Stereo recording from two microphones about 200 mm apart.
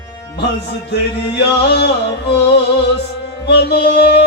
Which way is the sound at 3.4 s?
60° left (ahead or behind).